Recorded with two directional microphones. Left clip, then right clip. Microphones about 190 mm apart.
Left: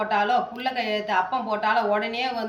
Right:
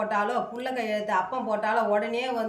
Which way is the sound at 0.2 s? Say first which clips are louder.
Left 4 dB; 20° right (ahead or behind).